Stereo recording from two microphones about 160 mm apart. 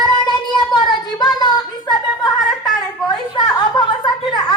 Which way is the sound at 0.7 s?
25° left (ahead or behind).